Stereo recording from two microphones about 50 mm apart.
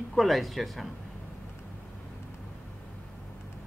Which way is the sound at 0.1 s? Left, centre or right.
Centre.